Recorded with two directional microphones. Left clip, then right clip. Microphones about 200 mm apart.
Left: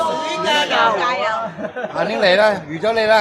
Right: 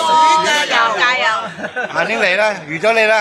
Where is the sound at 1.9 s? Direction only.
25° right (ahead or behind).